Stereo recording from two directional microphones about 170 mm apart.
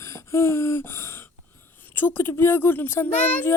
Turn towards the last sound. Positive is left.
turn(degrees=10)  # may be behind; listen again after turning